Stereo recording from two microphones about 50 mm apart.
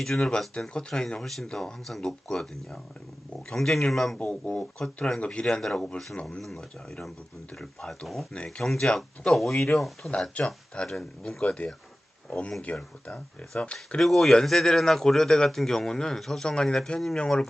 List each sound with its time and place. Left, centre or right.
0.0 s speech: centre
3.5 s speech: centre
4.2 s speech: left
5.2 s speech: centre
10.4 s speech: left
14.0 s speech: centre
16.4 s speech: centre
17.2 s speech: centre